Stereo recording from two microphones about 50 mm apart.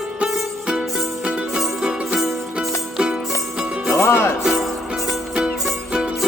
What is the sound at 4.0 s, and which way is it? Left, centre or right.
Music, left.